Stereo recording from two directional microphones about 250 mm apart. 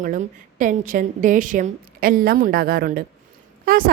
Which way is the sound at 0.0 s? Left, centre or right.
Right.